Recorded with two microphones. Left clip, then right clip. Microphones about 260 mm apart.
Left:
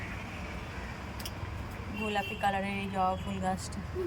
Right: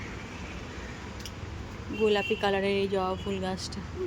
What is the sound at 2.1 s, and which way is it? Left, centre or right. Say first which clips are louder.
Speech: right 4 dB; centre.